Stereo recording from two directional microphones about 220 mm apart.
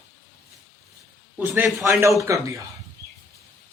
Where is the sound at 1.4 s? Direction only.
10° right (ahead or behind).